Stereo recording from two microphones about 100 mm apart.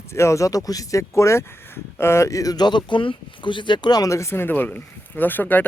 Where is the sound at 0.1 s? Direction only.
30° left (ahead or behind).